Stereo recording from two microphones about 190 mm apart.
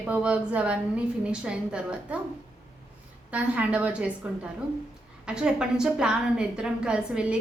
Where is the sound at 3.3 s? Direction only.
5° right (ahead or behind).